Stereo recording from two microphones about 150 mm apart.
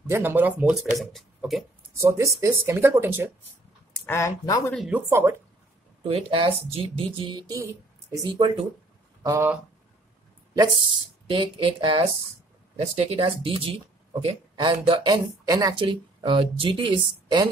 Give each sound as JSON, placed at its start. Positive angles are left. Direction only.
{"t": 0.1, "sound": "speech", "side_deg": -15}
{"t": 0.9, "sound": "speech", "side_deg": 0}
{"t": 2.0, "sound": "speech", "side_deg": -20}
{"t": 4.0, "sound": "speech", "side_deg": 20}
{"t": 4.7, "sound": "speech", "side_deg": -5}
{"t": 6.0, "sound": "speech", "side_deg": -40}
{"t": 11.2, "sound": "speech", "side_deg": -35}